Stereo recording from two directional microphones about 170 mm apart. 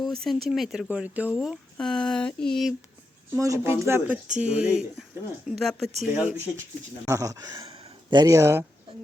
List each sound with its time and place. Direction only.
0.0 s speech: centre (ahead or behind)
3.3 s speech: 20° right (ahead or behind); by 5.9 s centre (ahead or behind)
6.1 s speech: 10° right (ahead or behind)
7.7 s a sound: 25° right (ahead or behind)